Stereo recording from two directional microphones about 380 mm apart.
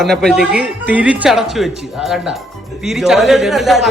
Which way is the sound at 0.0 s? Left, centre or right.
Centre.